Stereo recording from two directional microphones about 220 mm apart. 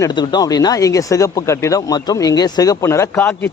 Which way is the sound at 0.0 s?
20° left (ahead or behind).